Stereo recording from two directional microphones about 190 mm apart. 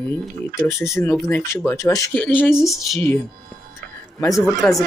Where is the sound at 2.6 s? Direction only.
Centre (ahead or behind).